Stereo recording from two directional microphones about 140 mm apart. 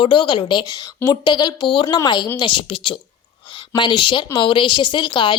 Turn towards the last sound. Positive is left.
turn(degrees=35)  # may be behind; listen again after turning